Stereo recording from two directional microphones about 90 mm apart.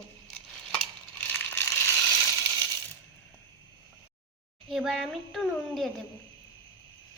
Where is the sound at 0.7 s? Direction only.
15° left (ahead or behind).